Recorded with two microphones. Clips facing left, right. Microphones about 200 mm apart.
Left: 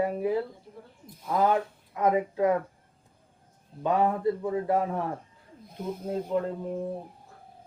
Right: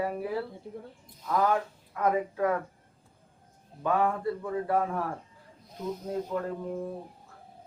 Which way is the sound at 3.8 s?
20° left (ahead or behind).